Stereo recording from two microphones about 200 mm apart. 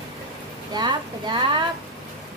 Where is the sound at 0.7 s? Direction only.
20° right (ahead or behind).